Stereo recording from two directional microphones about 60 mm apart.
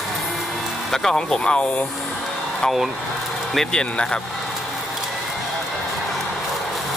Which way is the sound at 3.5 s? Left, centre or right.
Centre.